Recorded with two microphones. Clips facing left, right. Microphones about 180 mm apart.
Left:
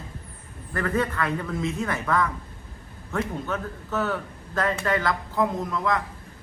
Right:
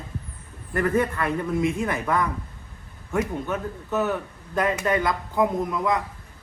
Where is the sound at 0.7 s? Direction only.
15° right (ahead or behind).